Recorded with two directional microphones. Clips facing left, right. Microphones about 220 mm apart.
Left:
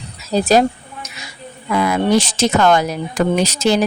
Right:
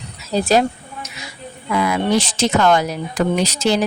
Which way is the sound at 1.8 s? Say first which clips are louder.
Left 3 dB; 45° left (ahead or behind).